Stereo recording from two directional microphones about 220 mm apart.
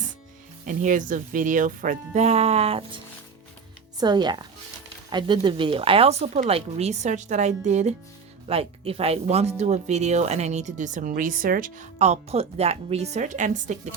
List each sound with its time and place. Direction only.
0.6 s speech: 35° right (ahead or behind)
4.0 s speech: 20° right (ahead or behind)